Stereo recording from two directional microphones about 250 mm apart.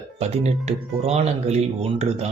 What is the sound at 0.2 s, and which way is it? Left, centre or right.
Speech, right.